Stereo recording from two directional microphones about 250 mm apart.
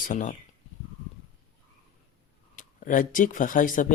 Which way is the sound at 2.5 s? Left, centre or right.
Left.